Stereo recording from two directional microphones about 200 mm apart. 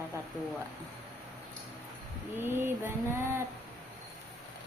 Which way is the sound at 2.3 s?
10° right (ahead or behind).